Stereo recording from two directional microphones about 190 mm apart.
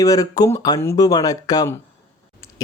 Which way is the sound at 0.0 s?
20° left (ahead or behind).